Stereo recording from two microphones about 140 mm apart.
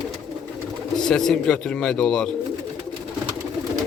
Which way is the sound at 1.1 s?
5° left (ahead or behind).